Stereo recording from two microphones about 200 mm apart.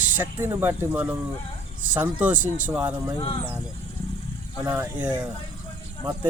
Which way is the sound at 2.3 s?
40° right (ahead or behind).